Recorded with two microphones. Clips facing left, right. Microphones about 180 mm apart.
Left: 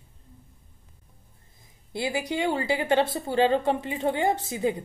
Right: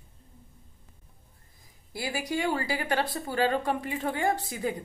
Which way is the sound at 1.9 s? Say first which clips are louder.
Left 3 dB; 20° left (ahead or behind).